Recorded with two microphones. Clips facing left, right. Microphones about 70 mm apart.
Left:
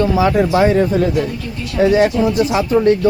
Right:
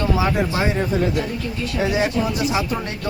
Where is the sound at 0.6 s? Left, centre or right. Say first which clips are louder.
Left 9 dB; left.